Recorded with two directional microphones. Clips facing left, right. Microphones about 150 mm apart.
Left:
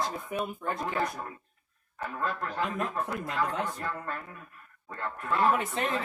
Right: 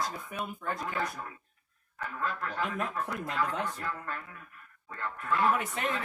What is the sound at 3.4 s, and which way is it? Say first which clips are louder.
Speech: left 2 dB; 35° left (ahead or behind).